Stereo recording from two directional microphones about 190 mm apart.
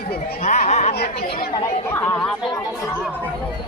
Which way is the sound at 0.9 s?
55° left (ahead or behind).